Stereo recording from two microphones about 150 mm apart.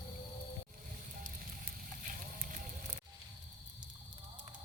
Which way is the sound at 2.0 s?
60° right (ahead or behind).